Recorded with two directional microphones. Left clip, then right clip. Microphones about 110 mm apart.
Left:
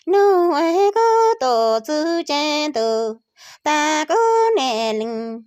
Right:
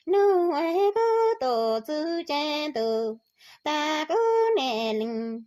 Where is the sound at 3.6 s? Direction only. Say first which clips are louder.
Left 8 dB; 30° left (ahead or behind).